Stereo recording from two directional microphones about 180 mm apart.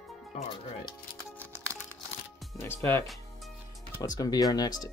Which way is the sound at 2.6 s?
15° left (ahead or behind).